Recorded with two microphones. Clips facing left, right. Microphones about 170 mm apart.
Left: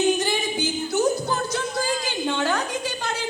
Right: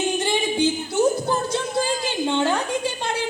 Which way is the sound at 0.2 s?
25° right (ahead or behind).